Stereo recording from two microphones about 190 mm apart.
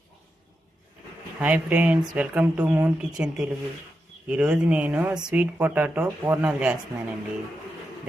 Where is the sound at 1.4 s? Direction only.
5° right (ahead or behind).